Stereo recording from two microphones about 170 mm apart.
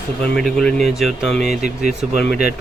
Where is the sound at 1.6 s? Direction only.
45° right (ahead or behind).